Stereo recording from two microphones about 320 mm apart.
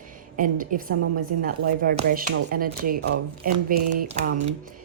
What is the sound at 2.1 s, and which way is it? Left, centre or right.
A woman's voice, right.